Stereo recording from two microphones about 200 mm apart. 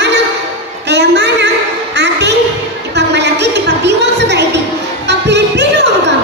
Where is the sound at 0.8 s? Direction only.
60° right (ahead or behind).